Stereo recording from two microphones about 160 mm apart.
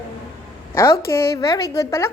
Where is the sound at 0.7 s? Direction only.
20° left (ahead or behind).